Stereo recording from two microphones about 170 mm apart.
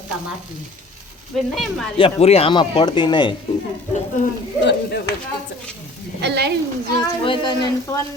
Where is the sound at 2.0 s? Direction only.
35° left (ahead or behind).